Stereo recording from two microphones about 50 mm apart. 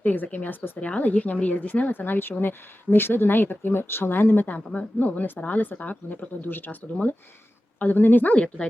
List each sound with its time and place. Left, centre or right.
0.0 s speech: left
4.5 s speech: left
5.0 s speech: left
7.8 s speech: left